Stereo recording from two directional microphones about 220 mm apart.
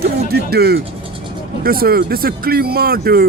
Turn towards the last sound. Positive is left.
turn(degrees=-45)  # may be behind; listen again after turning